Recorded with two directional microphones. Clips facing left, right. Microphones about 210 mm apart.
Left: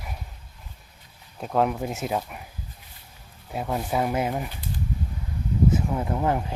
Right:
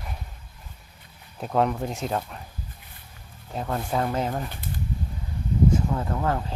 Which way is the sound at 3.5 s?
10° left (ahead or behind).